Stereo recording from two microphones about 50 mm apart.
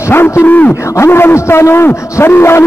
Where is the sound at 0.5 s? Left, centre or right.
Left.